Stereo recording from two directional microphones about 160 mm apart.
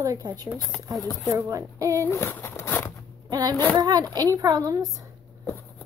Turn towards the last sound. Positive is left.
turn(degrees=15)  # may be behind; listen again after turning